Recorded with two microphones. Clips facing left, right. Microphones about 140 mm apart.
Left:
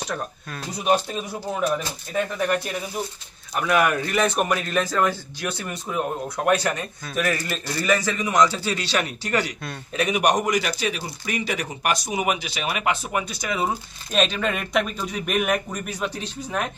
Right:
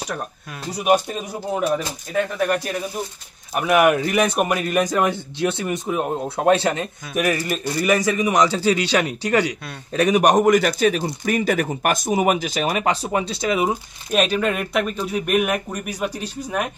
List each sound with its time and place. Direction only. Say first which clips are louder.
0.7 s a man's voice: right 3 dB; 10° right (ahead or behind)
3.5 s a man's voice: right 5 dB; 20° right (ahead or behind)
9.9 s speech: right 5 dB; 45° right (ahead or behind); by 13.7 s 25° right (ahead or behind)
14.1 s a man's voice: right 3 dB; 5° right (ahead or behind)